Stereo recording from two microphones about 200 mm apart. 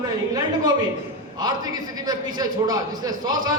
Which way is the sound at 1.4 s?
20° right (ahead or behind).